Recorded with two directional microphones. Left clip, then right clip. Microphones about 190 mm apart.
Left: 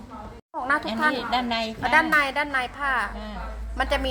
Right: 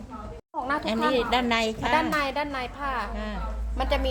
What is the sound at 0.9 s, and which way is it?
A woman's voice, 60° right (ahead or behind).